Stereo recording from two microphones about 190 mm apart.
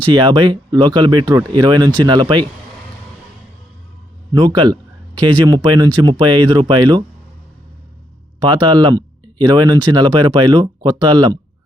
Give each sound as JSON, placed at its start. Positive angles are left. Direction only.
{"t": 0.1, "sound": "speech", "side_deg": -25}
{"t": 4.3, "sound": "speech", "side_deg": -25}
{"t": 8.4, "sound": "speech", "side_deg": -25}